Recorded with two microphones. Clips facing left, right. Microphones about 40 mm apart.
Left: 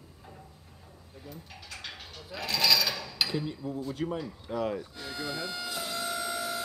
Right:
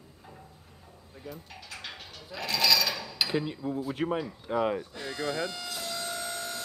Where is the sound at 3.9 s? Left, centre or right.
Right.